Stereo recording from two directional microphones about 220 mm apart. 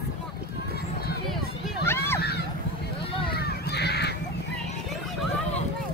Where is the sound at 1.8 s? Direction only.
10° left (ahead or behind).